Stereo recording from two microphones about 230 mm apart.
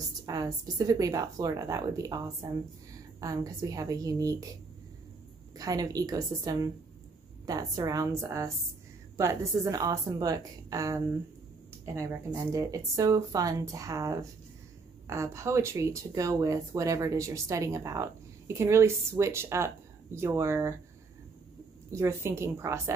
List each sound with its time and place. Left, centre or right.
0.3 s a woman's voice: centre
5.6 s speech: centre
21.9 s speech: centre